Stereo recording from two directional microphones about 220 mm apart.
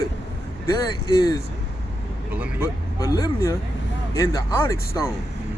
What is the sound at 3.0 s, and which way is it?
Speech, 15° left (ahead or behind).